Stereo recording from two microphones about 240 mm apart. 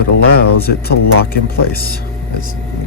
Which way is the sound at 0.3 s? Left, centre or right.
Left.